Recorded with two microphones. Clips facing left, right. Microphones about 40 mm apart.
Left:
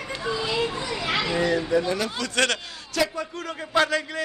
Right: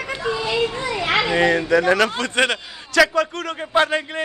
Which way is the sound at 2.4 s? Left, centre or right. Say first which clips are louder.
Right 4 dB; right.